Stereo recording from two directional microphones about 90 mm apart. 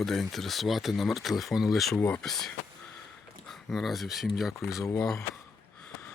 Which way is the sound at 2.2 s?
5° left (ahead or behind).